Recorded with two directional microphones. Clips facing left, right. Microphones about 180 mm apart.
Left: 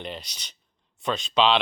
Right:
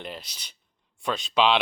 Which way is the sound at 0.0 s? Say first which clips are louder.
Left 2 dB; 5° right (ahead or behind).